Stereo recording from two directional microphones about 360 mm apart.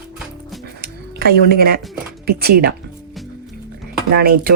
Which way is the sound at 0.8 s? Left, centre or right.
Right.